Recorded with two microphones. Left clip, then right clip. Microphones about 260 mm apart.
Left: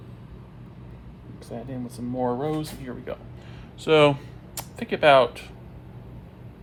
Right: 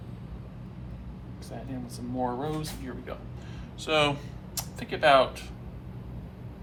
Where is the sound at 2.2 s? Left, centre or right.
Left.